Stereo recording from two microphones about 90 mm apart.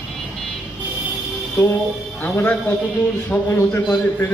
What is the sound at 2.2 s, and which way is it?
A man's voice, 20° left (ahead or behind).